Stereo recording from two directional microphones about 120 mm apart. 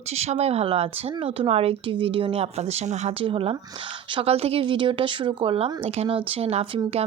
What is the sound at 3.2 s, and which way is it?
Speech, 50° right (ahead or behind).